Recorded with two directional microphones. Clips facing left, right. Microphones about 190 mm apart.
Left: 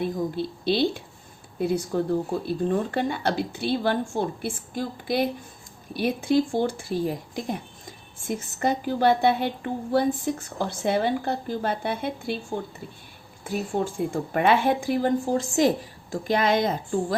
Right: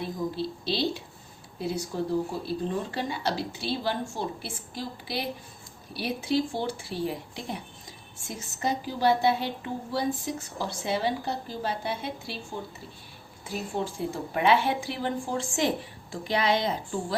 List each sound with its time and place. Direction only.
0.0 s a woman's voice: 55° left (ahead or behind)
13.4 s a woman's voice: 50° left (ahead or behind)